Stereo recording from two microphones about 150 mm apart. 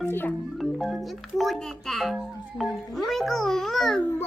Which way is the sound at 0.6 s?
Centre (ahead or behind).